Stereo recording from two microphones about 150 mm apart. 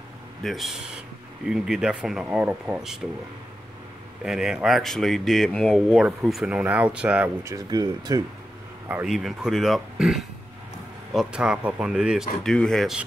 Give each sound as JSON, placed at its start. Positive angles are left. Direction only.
{"t": 0.4, "sound": "speech", "side_deg": 0}
{"t": 4.2, "sound": "speech", "side_deg": -5}
{"t": 7.4, "sound": "speech", "side_deg": -25}
{"t": 9.0, "sound": "speech", "side_deg": 0}